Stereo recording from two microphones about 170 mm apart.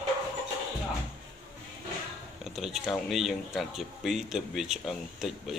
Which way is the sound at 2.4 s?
Centre (ahead or behind).